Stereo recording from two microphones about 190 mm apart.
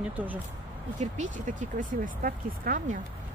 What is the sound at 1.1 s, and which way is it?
Speech, 40° right (ahead or behind).